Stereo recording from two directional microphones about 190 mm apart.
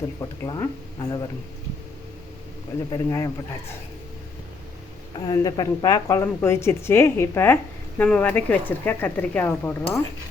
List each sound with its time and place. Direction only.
0.2 s speech: 20° left (ahead or behind)
2.9 s a woman's voice: 15° left (ahead or behind)
5.2 s a woman's voice: 20° left (ahead or behind)